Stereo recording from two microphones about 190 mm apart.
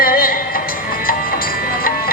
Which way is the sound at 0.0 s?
50° left (ahead or behind).